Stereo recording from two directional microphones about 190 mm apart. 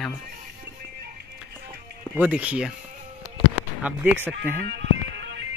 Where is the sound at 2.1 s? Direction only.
10° right (ahead or behind).